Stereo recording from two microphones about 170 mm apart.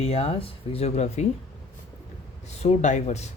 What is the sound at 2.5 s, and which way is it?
Speech, 40° left (ahead or behind).